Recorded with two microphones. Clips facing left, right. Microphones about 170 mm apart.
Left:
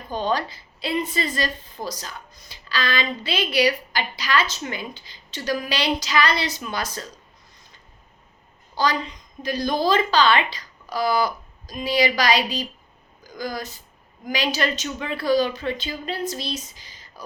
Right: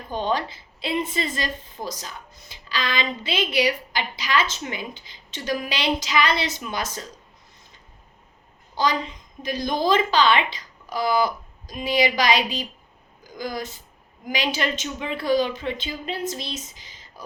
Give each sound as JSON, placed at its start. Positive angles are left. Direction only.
{"t": 0.1, "sound": "a woman's voice", "side_deg": -20}
{"t": 8.7, "sound": "a woman's voice", "side_deg": -20}